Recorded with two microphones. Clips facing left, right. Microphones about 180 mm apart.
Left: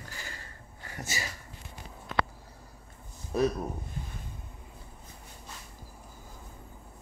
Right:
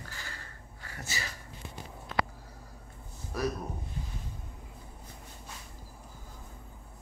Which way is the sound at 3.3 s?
25° left (ahead or behind).